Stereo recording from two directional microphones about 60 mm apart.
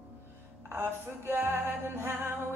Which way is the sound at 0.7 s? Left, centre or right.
Right.